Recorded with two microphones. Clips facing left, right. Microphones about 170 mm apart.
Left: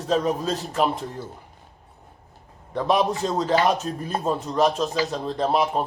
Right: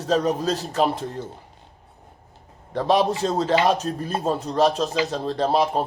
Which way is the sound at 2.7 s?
35° right (ahead or behind).